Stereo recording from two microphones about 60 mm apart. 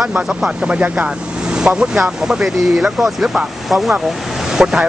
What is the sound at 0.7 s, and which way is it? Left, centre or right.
Speech, right.